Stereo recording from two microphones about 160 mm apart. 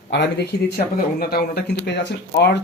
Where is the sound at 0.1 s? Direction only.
90° left.